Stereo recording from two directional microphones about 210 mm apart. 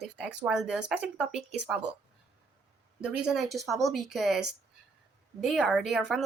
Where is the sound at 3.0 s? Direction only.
5° right (ahead or behind).